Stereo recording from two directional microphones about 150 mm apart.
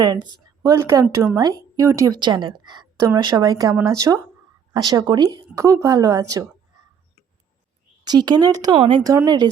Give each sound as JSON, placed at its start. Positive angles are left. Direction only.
{"t": 0.0, "sound": "a woman's voice", "side_deg": -30}
{"t": 8.0, "sound": "a woman's voice", "side_deg": -25}
{"t": 9.0, "sound": "a woman's voice", "side_deg": -25}